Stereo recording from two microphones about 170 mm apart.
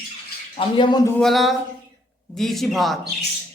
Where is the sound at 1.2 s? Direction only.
Centre (ahead or behind).